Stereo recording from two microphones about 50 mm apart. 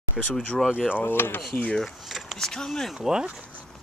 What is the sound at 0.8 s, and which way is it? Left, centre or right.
Speech, left.